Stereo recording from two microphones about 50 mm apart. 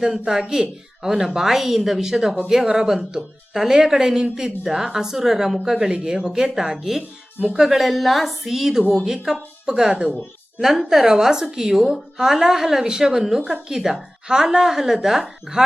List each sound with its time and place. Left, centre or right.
0.0 s a woman's voice: centre